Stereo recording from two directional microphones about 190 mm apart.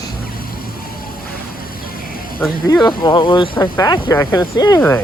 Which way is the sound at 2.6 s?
20° left (ahead or behind).